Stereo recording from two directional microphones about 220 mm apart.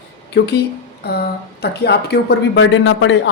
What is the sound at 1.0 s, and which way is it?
A woman's voice, 45° left (ahead or behind).